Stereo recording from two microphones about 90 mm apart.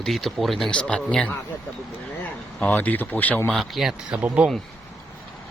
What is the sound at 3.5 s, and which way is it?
Speech, centre (ahead or behind).